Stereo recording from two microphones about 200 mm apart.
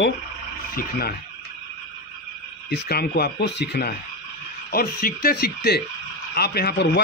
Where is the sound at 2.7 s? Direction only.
50° left (ahead or behind).